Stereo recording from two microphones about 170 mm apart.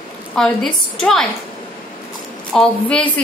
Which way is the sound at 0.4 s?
Centre (ahead or behind).